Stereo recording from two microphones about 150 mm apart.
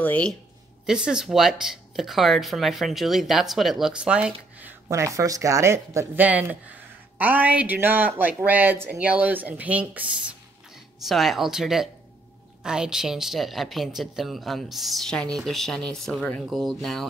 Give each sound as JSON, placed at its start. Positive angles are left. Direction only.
{"t": 0.0, "sound": "speech", "side_deg": 10}
{"t": 0.8, "sound": "speech", "side_deg": -5}
{"t": 4.8, "sound": "speech", "side_deg": -20}